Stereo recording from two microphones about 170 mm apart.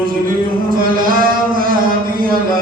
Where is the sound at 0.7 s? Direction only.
55° right (ahead or behind).